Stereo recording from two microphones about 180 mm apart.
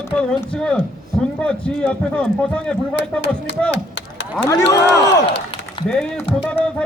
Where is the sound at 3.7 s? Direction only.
90° left.